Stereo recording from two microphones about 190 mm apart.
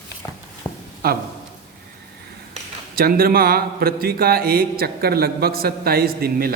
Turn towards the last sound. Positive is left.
turn(degrees=-50)  # may be behind; listen again after turning